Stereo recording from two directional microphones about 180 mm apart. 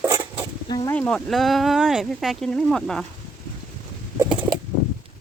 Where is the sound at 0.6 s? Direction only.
20° left (ahead or behind).